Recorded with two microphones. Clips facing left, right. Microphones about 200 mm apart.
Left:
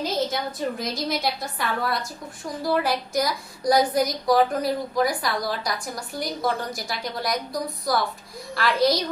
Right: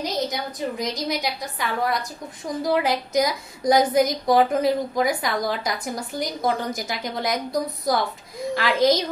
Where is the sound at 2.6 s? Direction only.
20° right (ahead or behind).